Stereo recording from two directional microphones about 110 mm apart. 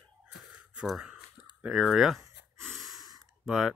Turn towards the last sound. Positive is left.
turn(degrees=-5)  # may be behind; listen again after turning